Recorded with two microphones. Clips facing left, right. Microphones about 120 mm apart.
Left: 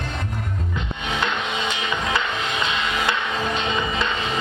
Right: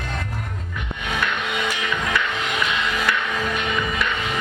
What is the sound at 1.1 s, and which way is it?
Music, 25° left (ahead or behind).